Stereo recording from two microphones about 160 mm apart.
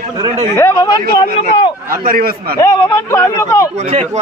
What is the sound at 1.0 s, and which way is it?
A man's voice, 65° right (ahead or behind).